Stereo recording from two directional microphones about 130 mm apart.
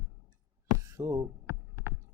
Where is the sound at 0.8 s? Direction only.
25° right (ahead or behind).